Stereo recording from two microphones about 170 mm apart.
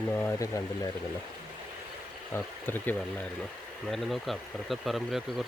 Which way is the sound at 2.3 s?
10° left (ahead or behind).